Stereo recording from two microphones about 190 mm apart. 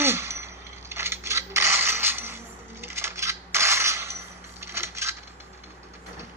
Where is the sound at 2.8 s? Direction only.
15° right (ahead or behind).